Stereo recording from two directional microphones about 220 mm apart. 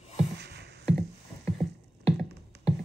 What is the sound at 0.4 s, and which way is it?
Music, 50° right (ahead or behind).